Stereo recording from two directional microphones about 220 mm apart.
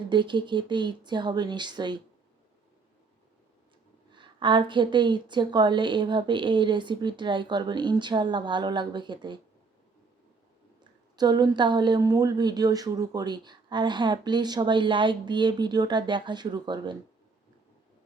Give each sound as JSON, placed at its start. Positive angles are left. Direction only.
{"t": 0.1, "sound": "speech", "side_deg": -20}
{"t": 4.1, "sound": "speech", "side_deg": -20}
{"t": 11.2, "sound": "speech", "side_deg": -20}